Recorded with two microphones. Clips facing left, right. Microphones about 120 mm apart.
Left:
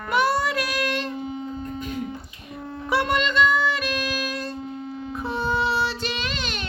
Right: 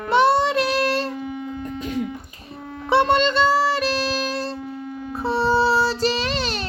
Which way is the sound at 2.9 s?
30° right (ahead or behind).